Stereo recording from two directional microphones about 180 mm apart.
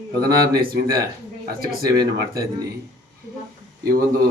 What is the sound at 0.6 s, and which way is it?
Speech, 55° right (ahead or behind).